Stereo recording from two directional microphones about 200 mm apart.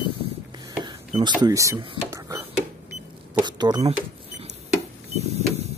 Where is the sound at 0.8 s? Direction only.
20° right (ahead or behind).